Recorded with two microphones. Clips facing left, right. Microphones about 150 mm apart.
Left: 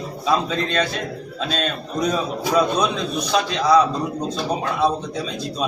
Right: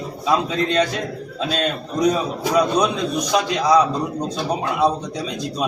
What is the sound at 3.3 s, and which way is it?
Speech, 15° right (ahead or behind).